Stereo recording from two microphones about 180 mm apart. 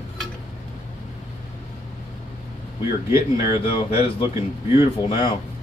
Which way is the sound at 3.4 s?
30° left (ahead or behind).